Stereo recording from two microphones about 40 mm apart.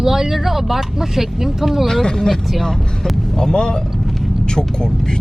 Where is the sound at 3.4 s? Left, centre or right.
Centre.